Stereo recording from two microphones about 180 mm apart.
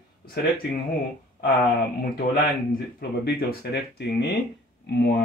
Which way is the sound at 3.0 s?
60° left (ahead or behind).